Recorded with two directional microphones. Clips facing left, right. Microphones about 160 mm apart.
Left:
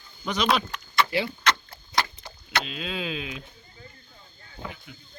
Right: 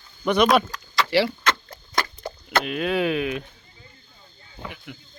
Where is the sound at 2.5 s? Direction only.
60° right (ahead or behind).